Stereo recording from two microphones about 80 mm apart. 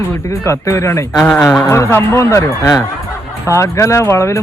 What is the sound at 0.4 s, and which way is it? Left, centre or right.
Speech, left.